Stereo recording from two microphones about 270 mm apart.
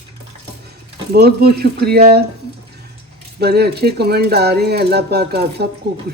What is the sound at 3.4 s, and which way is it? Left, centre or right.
Speech, right.